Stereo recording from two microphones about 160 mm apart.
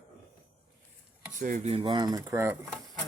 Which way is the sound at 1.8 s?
25° right (ahead or behind).